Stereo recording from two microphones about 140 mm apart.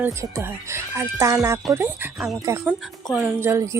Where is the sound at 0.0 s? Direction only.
20° right (ahead or behind).